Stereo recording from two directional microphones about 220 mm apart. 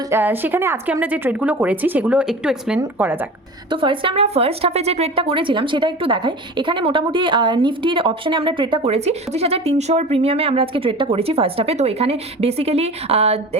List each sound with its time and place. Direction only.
0.1 s a woman's voice: 10° right (ahead or behind)
3.7 s a woman's voice: 25° right (ahead or behind)